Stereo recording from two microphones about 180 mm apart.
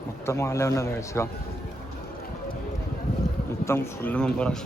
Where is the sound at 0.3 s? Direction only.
15° left (ahead or behind).